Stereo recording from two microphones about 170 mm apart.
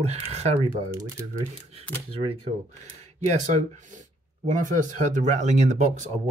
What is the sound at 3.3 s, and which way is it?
Speech, 45° right (ahead or behind).